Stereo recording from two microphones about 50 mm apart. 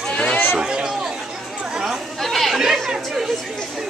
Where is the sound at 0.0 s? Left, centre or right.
Centre.